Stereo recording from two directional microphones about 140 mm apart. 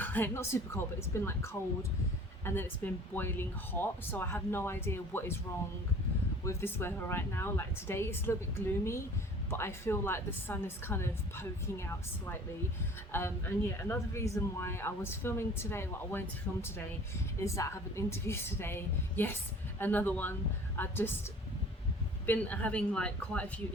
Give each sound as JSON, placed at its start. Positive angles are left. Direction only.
{"t": 0.0, "sound": "speech", "side_deg": 15}
{"t": 6.4, "sound": "a woman's voice", "side_deg": 20}
{"t": 22.3, "sound": "speech", "side_deg": 10}